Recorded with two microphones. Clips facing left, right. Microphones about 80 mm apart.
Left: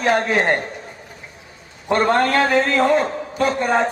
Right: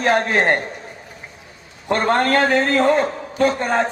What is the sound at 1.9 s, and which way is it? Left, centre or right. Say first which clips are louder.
A man's voice: left 1 dB; right.